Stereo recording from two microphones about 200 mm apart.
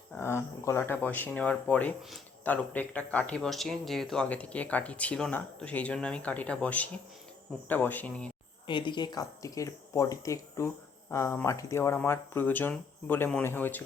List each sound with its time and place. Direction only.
0.1 s speech: 10° left (ahead or behind)
8.6 s speech: 25° left (ahead or behind); by 13.8 s 10° left (ahead or behind)